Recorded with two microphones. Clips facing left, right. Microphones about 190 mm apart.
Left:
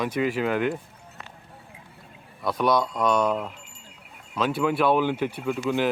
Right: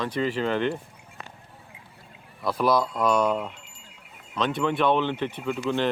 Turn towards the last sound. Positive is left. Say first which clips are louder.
# left 1 dB
turn(degrees=5)  # may be behind; listen again after turning